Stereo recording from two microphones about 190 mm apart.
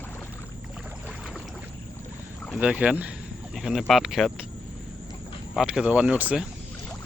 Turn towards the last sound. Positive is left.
turn(degrees=-5)  # may be behind; listen again after turning